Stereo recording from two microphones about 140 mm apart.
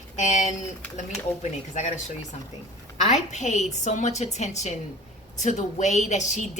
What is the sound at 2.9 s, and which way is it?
A woman's voice, 55° left (ahead or behind).